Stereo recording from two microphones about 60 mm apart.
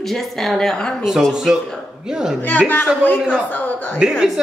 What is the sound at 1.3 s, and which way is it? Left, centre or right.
A man's voice, centre.